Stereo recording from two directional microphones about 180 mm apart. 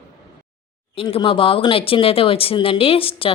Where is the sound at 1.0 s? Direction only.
30° left (ahead or behind).